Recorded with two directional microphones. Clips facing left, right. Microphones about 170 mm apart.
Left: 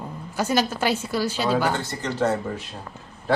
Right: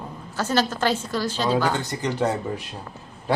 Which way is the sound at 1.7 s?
15° right (ahead or behind).